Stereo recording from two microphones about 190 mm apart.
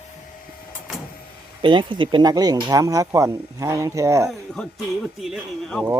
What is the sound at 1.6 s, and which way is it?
Speech, 25° right (ahead or behind).